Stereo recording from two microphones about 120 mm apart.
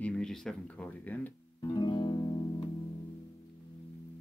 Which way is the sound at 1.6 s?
40° left (ahead or behind).